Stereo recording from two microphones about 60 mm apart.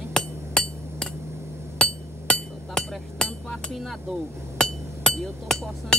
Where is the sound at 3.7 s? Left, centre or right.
Centre.